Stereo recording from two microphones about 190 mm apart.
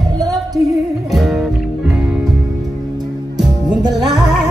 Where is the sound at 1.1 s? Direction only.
Centre (ahead or behind).